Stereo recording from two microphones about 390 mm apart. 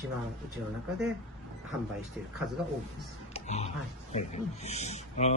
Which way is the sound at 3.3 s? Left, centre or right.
Centre.